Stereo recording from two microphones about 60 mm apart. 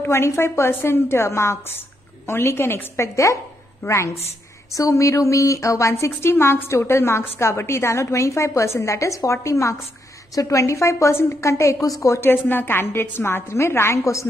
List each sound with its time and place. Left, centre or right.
0.0 s a woman's voice: left
4.7 s a woman's voice: left
11.8 s a woman's voice: left
12.2 s a woman's voice: left